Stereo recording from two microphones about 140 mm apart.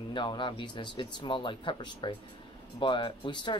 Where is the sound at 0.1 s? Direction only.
35° left (ahead or behind).